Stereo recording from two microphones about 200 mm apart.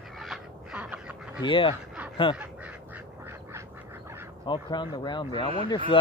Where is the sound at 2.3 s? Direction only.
5° right (ahead or behind).